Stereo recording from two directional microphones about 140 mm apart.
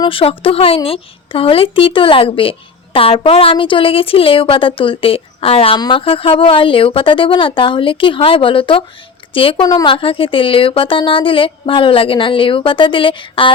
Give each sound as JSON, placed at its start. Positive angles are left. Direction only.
{"t": 0.0, "sound": "a woman's voice", "side_deg": 40}
{"t": 9.6, "sound": "a woman's voice", "side_deg": 25}
{"t": 9.9, "sound": "a woman's voice", "side_deg": 40}